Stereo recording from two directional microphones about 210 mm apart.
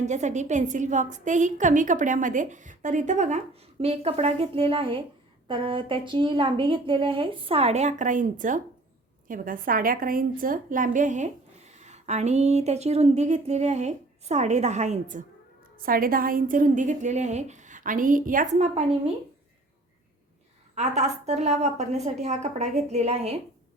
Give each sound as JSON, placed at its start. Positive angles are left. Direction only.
{"t": 0.0, "sound": "a woman's voice", "side_deg": -35}
{"t": 20.7, "sound": "a woman's voice", "side_deg": -35}